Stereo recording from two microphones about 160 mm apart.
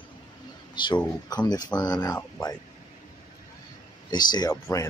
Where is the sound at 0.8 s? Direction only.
30° left (ahead or behind).